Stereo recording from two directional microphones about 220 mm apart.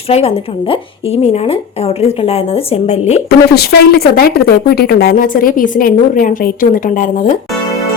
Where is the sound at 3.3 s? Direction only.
45° left (ahead or behind).